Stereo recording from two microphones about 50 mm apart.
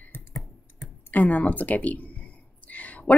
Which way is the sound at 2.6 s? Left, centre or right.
Left.